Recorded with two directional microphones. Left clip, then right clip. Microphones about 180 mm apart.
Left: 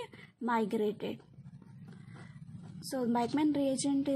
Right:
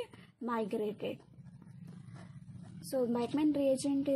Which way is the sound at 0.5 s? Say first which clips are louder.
Left 4 dB; 35° left (ahead or behind).